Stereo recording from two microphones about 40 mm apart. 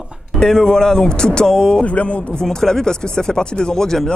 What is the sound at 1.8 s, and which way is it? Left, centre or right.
Speech, left.